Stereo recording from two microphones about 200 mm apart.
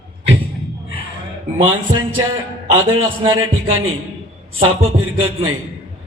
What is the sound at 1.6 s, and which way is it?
Speech, 25° right (ahead or behind).